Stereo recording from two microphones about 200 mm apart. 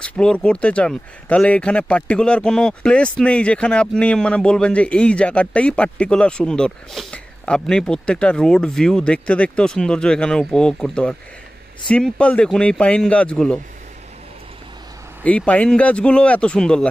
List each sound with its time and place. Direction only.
0.0 s speech: 5° left (ahead or behind)
15.2 s speech: 5° left (ahead or behind)